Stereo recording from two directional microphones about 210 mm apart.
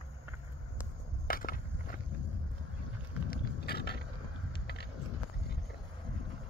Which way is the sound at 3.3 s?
50° left (ahead or behind).